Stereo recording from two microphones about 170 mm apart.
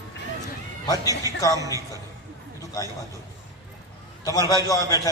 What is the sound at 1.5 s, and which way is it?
Speech, 20° right (ahead or behind).